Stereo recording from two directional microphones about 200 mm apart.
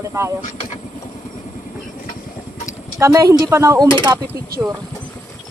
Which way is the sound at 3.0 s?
15° right (ahead or behind).